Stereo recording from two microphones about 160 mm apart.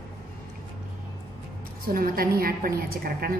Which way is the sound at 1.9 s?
65° right (ahead or behind).